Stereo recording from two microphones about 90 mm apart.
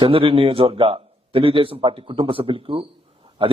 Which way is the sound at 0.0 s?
90° right.